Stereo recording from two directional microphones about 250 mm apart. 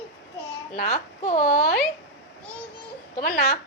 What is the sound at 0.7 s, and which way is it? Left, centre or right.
A woman's voice, left.